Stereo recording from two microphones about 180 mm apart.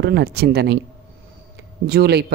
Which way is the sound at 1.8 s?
60° right (ahead or behind).